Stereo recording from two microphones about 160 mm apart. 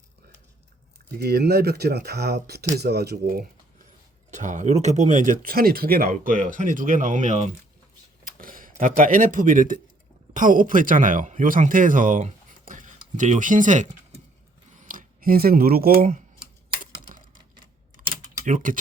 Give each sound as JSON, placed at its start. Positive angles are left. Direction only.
{"t": 1.2, "sound": "speech", "side_deg": -90}
{"t": 4.3, "sound": "speech", "side_deg": -50}
{"t": 8.2, "sound": "speech", "side_deg": -60}
{"t": 16.8, "sound": "a sound", "side_deg": -55}
{"t": 18.4, "sound": "speech", "side_deg": -55}